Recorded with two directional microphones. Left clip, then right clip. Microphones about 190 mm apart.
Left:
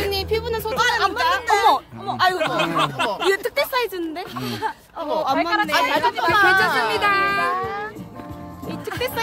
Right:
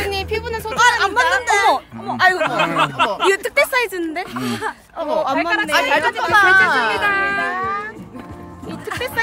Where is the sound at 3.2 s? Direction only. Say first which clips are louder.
Right 4 dB; 45° right (ahead or behind); by 5.2 s 60° right (ahead or behind).